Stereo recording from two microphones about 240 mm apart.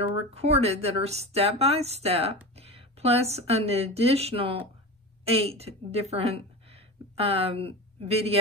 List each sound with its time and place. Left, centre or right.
0.3 s a woman's voice: right